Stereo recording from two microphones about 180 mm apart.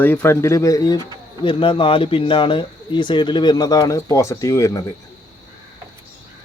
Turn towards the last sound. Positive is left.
turn(degrees=20)  # may be behind; listen again after turning